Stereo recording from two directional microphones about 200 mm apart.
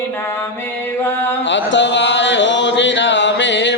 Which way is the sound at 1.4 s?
65° left (ahead or behind).